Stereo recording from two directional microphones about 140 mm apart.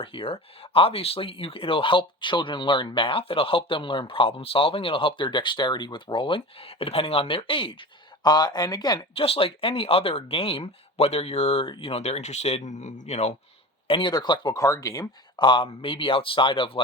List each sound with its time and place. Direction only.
0.0 s speech: 40° left (ahead or behind)
9.1 s speech: 45° left (ahead or behind)
13.8 s speech: 35° left (ahead or behind)
15.4 s speech: 35° left (ahead or behind)